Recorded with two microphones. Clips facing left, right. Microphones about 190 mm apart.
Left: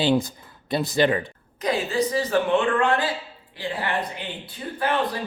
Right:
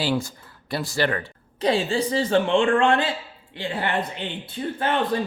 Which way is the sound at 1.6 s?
30° right (ahead or behind).